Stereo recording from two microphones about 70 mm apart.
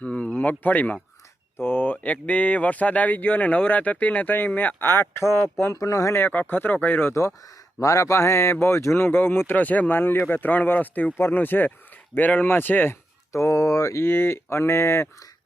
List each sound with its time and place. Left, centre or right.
0.0 s speech: centre; by 5.7 s left
5.7 s speech: left
6.1 s speech: left
7.1 s speech: left
13.3 s speech: left
14.1 s speech: left